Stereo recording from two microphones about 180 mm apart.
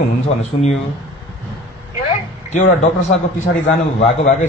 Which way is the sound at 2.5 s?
45° left (ahead or behind).